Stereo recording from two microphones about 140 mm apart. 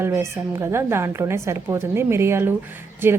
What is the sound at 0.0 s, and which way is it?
A woman's voice, 20° right (ahead or behind).